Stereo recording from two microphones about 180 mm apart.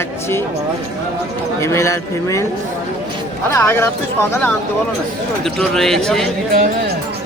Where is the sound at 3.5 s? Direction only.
15° left (ahead or behind).